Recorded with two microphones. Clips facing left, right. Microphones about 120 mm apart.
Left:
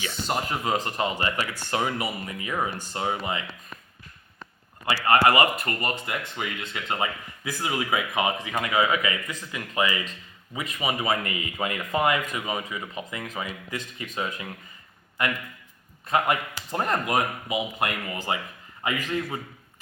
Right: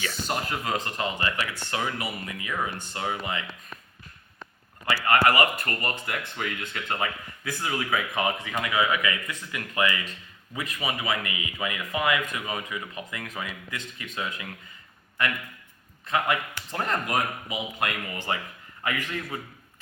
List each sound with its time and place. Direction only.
0.0 s speech: 20° left (ahead or behind)
4.9 s speech: 30° left (ahead or behind)
12.3 s speech: 20° left (ahead or behind)
13.7 s speech: 35° left (ahead or behind)
16.0 s speech: 30° left (ahead or behind)
17.8 s speech: 35° left (ahead or behind)
18.8 s speech: 25° left (ahead or behind)